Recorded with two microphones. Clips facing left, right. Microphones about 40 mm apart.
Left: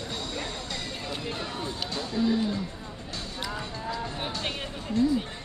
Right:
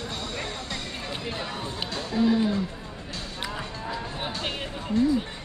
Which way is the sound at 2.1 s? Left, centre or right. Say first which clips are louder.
Right 4 dB; right.